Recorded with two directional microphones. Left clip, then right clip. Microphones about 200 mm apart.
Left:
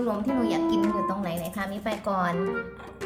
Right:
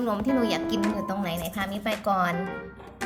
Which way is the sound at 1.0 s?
15° right (ahead or behind).